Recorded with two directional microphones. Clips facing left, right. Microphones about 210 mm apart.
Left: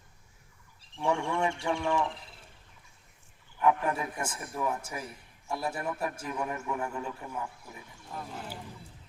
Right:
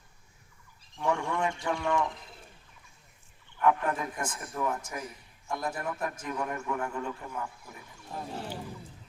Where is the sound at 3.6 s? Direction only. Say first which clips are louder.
Even; 10° left (ahead or behind).